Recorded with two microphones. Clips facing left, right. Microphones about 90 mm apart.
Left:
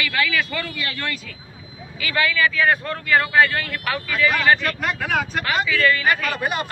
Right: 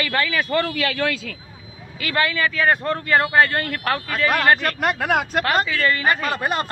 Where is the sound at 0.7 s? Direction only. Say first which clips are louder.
Right 6 dB; 90° right.